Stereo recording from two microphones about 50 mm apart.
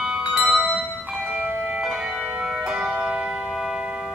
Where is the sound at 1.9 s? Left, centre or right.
Centre.